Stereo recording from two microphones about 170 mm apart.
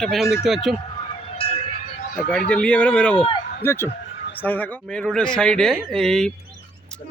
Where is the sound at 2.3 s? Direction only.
5° left (ahead or behind).